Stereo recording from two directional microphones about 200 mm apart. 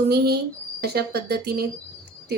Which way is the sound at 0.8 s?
50° right (ahead or behind).